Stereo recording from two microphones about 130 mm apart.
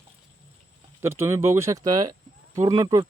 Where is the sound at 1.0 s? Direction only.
20° right (ahead or behind).